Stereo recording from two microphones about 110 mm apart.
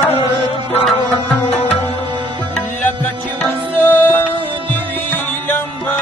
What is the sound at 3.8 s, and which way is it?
Music, 20° left (ahead or behind).